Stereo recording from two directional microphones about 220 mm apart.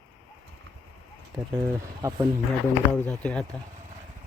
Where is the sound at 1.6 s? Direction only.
15° right (ahead or behind).